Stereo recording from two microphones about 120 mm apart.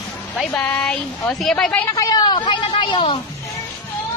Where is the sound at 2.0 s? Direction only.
30° left (ahead or behind); by 3.2 s 50° left (ahead or behind).